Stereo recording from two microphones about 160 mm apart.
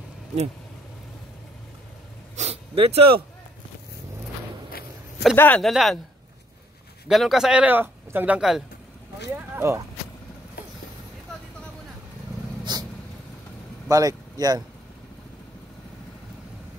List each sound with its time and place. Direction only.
2.3 s a sound: 40° right (ahead or behind)
5.3 s speech: 15° left (ahead or behind)
5.6 s speech: centre (ahead or behind)
7.1 s speech: centre (ahead or behind)
9.3 s speech: 15° right (ahead or behind)
12.7 s vehicle: 25° right (ahead or behind)
13.8 s speech: 20° right (ahead or behind)